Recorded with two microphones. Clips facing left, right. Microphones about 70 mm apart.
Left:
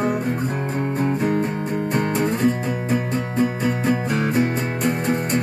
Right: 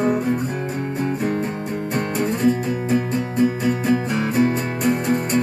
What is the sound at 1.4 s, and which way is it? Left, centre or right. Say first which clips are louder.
Music: left 1 dB; centre.